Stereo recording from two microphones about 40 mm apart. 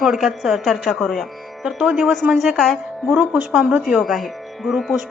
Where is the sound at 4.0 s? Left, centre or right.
Centre.